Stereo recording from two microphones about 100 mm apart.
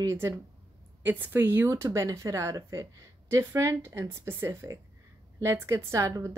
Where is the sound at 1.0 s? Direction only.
20° right (ahead or behind).